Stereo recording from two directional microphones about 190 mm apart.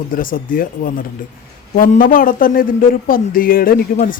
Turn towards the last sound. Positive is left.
turn(degrees=50)  # may be behind; listen again after turning